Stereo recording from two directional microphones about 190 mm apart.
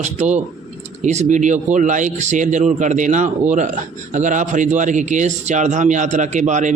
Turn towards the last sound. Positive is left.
turn(degrees=-40)  # may be behind; listen again after turning